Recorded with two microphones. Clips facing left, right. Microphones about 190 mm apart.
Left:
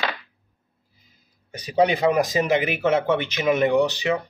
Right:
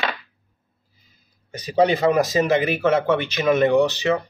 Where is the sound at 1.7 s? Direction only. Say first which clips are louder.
Right 2 dB; 15° left (ahead or behind).